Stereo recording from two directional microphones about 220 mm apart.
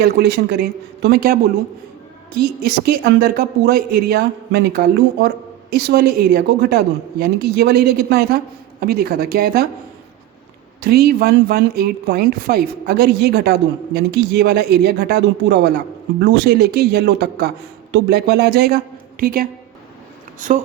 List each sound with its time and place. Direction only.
0.0 s a woman's voice: 50° right (ahead or behind)
10.8 s a woman's voice: 45° right (ahead or behind)